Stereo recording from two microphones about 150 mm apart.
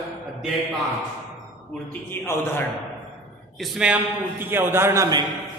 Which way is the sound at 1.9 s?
15° left (ahead or behind).